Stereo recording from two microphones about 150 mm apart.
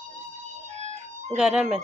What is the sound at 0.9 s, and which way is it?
Music, 50° right (ahead or behind).